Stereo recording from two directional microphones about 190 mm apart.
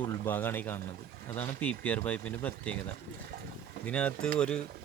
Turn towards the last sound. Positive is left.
turn(degrees=5)  # may be behind; listen again after turning